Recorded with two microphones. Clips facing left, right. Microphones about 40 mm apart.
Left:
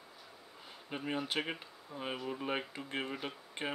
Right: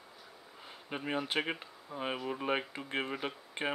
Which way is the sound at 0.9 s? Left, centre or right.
Centre.